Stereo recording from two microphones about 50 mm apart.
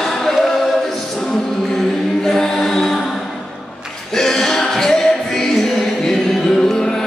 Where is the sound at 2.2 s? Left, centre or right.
Centre.